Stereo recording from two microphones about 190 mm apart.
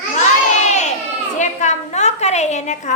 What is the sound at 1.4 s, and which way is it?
A woman's voice, 35° left (ahead or behind).